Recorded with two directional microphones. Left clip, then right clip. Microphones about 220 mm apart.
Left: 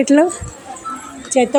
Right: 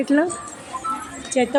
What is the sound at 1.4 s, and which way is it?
Speech, 20° left (ahead or behind).